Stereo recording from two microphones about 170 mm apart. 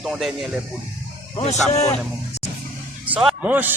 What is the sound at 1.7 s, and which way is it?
Speech, 40° left (ahead or behind).